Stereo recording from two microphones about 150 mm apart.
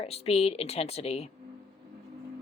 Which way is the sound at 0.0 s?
40° left (ahead or behind).